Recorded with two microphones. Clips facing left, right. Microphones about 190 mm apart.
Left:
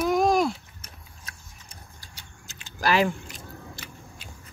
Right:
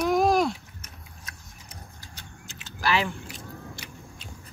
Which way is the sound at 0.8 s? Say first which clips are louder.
Right 1 dB; 30° left (ahead or behind).